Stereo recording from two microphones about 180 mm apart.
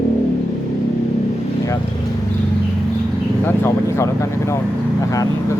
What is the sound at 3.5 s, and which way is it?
Speech, 15° left (ahead or behind).